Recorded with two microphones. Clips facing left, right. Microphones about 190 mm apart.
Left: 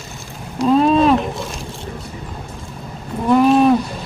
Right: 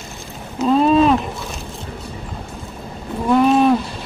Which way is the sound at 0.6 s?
Centre (ahead or behind).